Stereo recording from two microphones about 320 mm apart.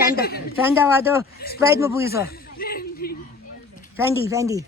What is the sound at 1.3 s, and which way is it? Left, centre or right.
Speech, left.